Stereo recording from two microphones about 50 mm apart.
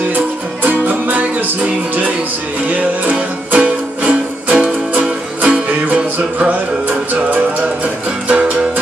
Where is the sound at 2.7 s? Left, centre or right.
Right.